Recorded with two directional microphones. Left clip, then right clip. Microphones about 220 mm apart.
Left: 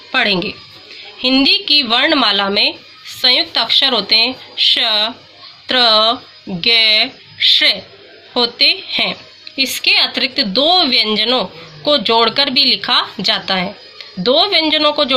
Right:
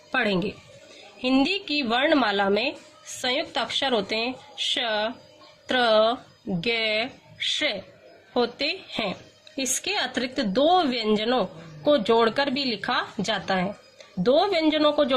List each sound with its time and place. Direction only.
0.1 s speech: 20° right (ahead or behind)
8.3 s speech: 20° right (ahead or behind)